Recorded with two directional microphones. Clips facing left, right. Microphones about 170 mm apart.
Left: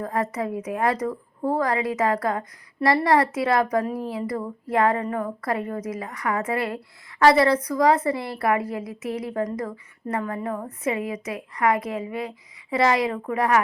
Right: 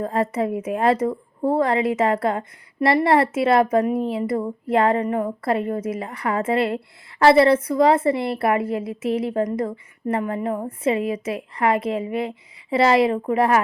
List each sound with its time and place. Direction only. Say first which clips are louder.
0.0 s a woman's voice: right 4 dB; 25° right (ahead or behind)